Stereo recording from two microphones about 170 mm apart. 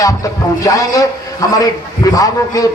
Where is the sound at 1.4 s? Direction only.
20° left (ahead or behind).